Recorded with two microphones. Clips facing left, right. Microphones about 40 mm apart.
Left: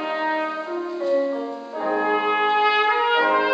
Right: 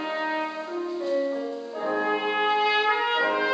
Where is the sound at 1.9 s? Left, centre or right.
Centre.